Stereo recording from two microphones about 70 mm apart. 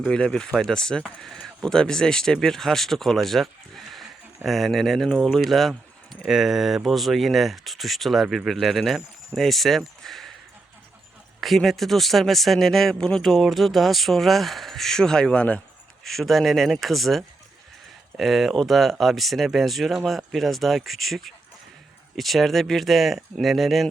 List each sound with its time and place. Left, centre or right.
0.0 s speech: centre
11.3 s speech: centre
16.0 s speech: centre